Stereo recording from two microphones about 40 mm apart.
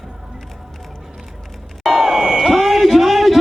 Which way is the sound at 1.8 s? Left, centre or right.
Centre.